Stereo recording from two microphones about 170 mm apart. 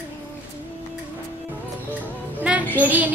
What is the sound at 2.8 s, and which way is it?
Child singing, 10° right (ahead or behind).